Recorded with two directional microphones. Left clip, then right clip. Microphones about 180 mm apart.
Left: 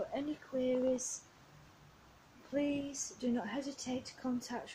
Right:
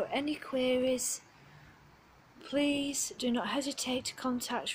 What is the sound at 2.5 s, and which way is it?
A woman's voice, 5° right (ahead or behind).